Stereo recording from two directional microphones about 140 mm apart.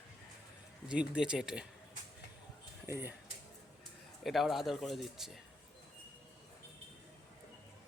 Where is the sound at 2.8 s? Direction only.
15° right (ahead or behind).